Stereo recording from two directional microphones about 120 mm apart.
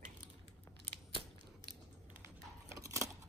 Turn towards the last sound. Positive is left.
turn(degrees=-25)  # may be behind; listen again after turning